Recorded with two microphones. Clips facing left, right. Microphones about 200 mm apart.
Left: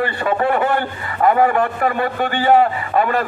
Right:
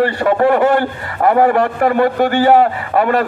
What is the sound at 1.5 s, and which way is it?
Speech, 70° right (ahead or behind).